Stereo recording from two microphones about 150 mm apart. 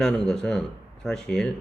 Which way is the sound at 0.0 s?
5° left (ahead or behind).